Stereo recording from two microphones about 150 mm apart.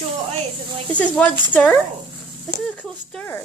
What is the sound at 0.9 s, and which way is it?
Speech, 10° left (ahead or behind).